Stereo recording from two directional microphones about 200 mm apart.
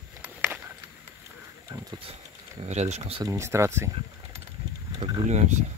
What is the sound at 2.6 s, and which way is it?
Speech, 35° right (ahead or behind).